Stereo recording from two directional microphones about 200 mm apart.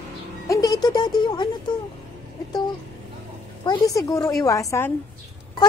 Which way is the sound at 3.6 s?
15° left (ahead or behind).